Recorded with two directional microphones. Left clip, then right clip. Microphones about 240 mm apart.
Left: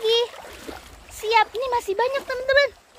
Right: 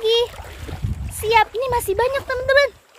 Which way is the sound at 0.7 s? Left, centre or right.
Centre.